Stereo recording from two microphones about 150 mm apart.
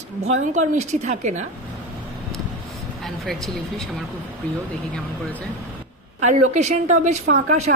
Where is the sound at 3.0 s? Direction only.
Centre (ahead or behind).